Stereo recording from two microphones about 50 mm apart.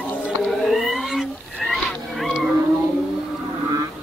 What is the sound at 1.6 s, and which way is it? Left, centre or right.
Pig, centre.